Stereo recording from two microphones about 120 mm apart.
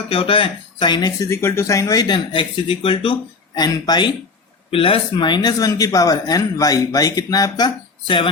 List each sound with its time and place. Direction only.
0.1 s speech: 50° left (ahead or behind)
4.7 s speech: 50° left (ahead or behind); by 7.7 s 30° left (ahead or behind)
8.0 s speech: 45° left (ahead or behind)